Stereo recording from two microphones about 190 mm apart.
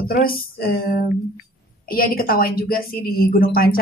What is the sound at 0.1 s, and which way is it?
A woman's voice, 50° left (ahead or behind).